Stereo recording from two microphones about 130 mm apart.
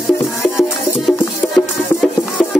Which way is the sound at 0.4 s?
Centre (ahead or behind).